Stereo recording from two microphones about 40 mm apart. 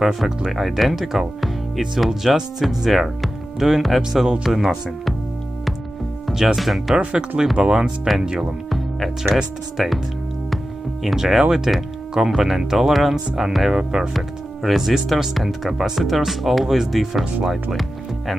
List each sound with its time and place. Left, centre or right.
0.0 s speech: centre
6.2 s speech: centre
7.0 s speech: right
8.6 s music: centre
9.8 s speech: centre
11.1 s speech: centre